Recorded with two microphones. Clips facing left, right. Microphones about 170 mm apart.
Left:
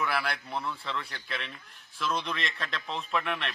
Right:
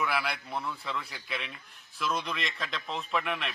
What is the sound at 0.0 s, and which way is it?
Speech, centre (ahead or behind).